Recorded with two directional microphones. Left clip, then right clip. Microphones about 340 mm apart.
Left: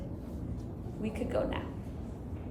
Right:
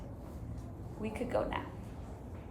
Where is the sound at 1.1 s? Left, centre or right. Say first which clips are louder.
Left 1 dB; centre.